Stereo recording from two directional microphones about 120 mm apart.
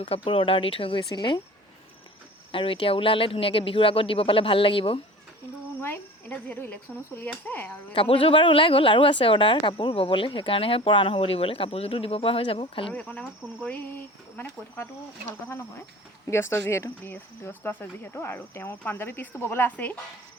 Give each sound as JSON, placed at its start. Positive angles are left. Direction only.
{"t": 0.0, "sound": "speech", "side_deg": 50}
{"t": 2.5, "sound": "speech", "side_deg": 45}
{"t": 5.8, "sound": "speech", "side_deg": 15}
{"t": 7.9, "sound": "speech", "side_deg": 50}
{"t": 12.9, "sound": "speech", "side_deg": 10}
{"t": 16.2, "sound": "speech", "side_deg": 20}